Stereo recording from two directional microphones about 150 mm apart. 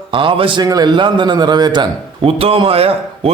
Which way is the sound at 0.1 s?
35° right (ahead or behind).